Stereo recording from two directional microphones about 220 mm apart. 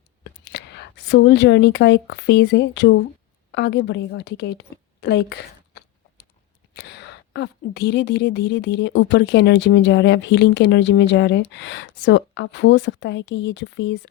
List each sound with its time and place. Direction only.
0.4 s a woman's voice: 50° left (ahead or behind)